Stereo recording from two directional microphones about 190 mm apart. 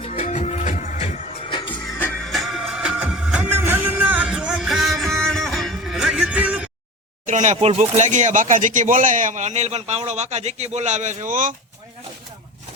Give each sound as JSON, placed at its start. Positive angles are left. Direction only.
{"t": 0.0, "sound": "music", "side_deg": 35}
{"t": 1.7, "sound": "music", "side_deg": 5}
{"t": 7.3, "sound": "speech", "side_deg": -40}